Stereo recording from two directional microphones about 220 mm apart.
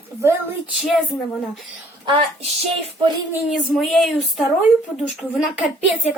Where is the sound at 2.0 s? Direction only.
25° right (ahead or behind).